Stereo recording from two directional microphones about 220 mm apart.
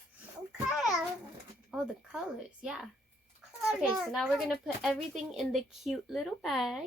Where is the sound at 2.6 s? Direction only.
5° right (ahead or behind).